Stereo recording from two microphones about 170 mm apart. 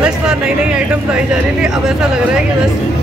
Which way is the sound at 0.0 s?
5° right (ahead or behind).